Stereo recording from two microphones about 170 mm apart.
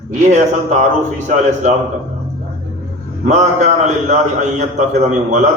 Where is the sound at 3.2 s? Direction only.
45° right (ahead or behind).